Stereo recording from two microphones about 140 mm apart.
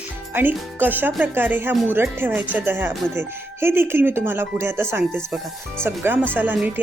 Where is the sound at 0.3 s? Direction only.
15° right (ahead or behind).